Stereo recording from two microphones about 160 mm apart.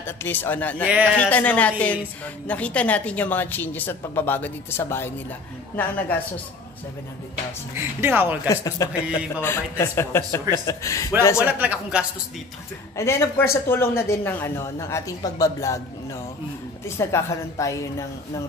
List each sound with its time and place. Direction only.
0.0 s speech: 15° left (ahead or behind)
0.8 s speech: 5° right (ahead or behind)
1.1 s speech: 10° left (ahead or behind)
7.7 s speech: 15° right (ahead or behind)
8.5 s a woman's voice: 20° left (ahead or behind)
11.3 s speech: 10° right (ahead or behind)
12.9 s a woman's voice: 15° left (ahead or behind)
16.8 s a woman's voice: 15° left (ahead or behind)